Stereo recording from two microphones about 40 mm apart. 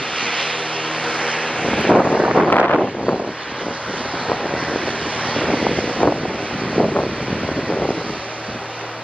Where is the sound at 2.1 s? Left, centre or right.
Right.